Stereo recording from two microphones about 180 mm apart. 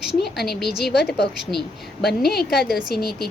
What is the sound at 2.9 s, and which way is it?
Speech, 60° left (ahead or behind).